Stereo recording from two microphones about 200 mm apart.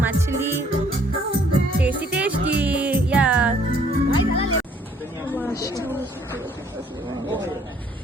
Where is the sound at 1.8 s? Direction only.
5° right (ahead or behind).